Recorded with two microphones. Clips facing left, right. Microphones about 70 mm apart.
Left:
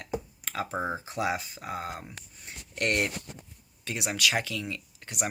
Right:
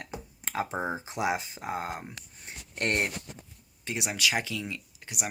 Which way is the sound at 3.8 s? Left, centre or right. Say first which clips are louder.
Left 1 dB; centre.